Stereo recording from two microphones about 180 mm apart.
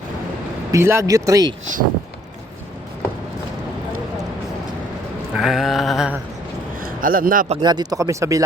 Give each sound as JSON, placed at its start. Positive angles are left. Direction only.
{"t": 0.7, "sound": "speech", "side_deg": -15}
{"t": 5.3, "sound": "mantra", "side_deg": 0}
{"t": 6.8, "sound": "a man's voice", "side_deg": -50}
{"t": 7.5, "sound": "speech", "side_deg": -25}